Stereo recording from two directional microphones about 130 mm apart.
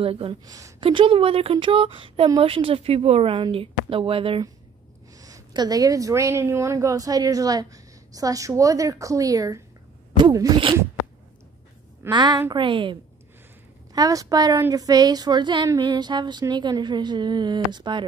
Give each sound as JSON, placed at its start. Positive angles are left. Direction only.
{"t": 0.0, "sound": "speech", "side_deg": -45}
{"t": 0.5, "sound": "a woman's voice", "side_deg": -25}
{"t": 0.7, "sound": "speech", "side_deg": -40}
{"t": 5.1, "sound": "a woman's voice", "side_deg": -25}
{"t": 12.1, "sound": "a sound", "side_deg": -35}
{"t": 13.9, "sound": "a woman's voice", "side_deg": -30}
{"t": 14.6, "sound": "a sound", "side_deg": -25}